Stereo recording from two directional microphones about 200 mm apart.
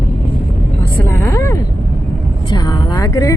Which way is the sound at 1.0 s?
15° left (ahead or behind).